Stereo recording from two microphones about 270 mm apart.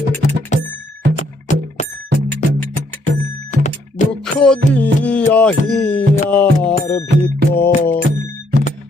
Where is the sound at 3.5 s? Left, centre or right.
Left.